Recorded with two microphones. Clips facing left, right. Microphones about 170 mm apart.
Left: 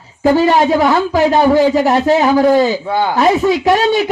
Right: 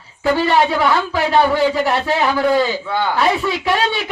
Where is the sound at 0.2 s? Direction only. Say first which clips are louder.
Left 4 dB; 45° left (ahead or behind).